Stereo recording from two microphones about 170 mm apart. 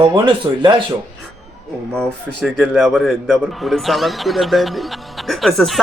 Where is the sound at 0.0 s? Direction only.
30° right (ahead or behind).